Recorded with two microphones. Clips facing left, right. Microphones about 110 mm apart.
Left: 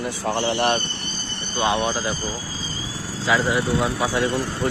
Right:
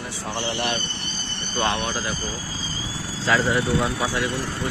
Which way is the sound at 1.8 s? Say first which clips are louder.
Left 4 dB; 25° left (ahead or behind).